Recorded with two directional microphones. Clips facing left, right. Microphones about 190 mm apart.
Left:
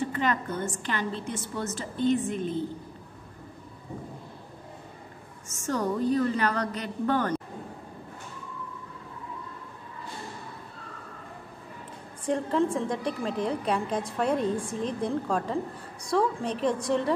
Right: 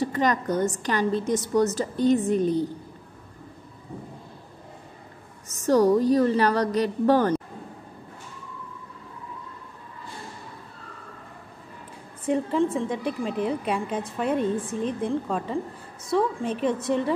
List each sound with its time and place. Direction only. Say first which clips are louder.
0.0 s a woman's voice: right 4 dB; 40° right (ahead or behind)
5.5 s a woman's voice: right 10 dB; 35° right (ahead or behind)
12.3 s a woman's voice: right 2 dB; centre (ahead or behind)